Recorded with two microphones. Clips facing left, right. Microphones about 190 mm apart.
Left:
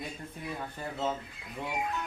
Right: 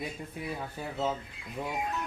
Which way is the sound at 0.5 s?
5° right (ahead or behind).